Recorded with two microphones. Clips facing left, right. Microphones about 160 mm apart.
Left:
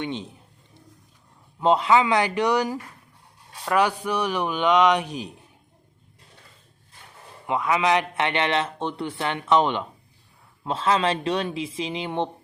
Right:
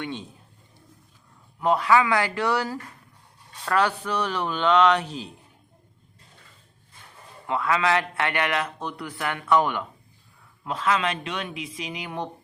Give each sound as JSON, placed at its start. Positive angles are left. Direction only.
{"t": 0.0, "sound": "a man's voice", "side_deg": 20}
{"t": 1.5, "sound": "a man's voice", "side_deg": 20}
{"t": 7.4, "sound": "a man's voice", "side_deg": 20}